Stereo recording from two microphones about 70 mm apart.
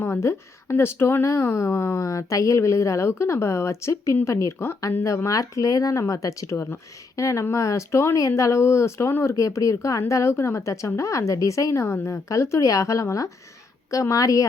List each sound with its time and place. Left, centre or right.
0.0 s speech: left
9.3 s speech: left